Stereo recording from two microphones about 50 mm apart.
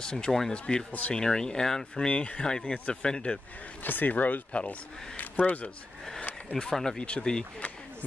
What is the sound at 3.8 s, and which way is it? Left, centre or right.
Speech, left.